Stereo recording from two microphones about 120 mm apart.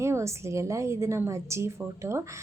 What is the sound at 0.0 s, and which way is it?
A woman's voice, 25° right (ahead or behind).